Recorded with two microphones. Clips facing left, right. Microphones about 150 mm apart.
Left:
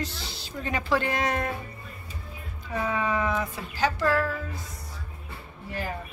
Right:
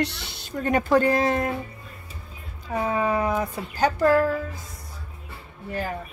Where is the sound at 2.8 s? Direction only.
35° right (ahead or behind).